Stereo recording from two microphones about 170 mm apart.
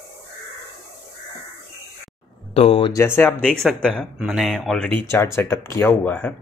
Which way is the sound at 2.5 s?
35° left (ahead or behind).